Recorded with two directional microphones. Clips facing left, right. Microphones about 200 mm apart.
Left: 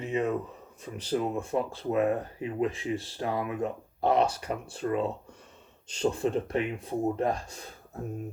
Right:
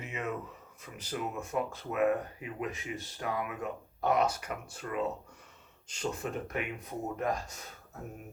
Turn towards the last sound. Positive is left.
turn(degrees=30)  # may be behind; listen again after turning